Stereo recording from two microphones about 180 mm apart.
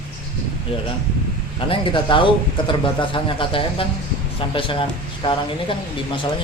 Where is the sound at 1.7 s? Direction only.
30° left (ahead or behind).